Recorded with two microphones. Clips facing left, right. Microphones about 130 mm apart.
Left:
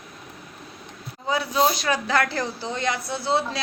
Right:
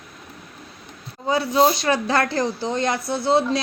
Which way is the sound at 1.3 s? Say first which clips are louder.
Right 4 dB; 30° right (ahead or behind).